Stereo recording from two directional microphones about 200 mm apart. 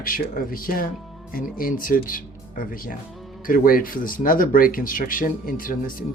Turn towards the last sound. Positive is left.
turn(degrees=45)  # may be behind; listen again after turning